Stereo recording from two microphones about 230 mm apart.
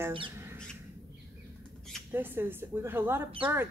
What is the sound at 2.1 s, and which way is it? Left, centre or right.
Speech, centre.